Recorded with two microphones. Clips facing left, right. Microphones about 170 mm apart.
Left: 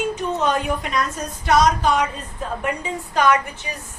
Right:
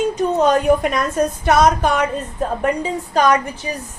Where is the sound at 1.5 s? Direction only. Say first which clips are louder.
Right 1 dB; 55° right (ahead or behind).